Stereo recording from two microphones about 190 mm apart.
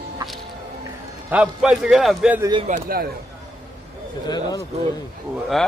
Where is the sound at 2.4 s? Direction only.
25° right (ahead or behind).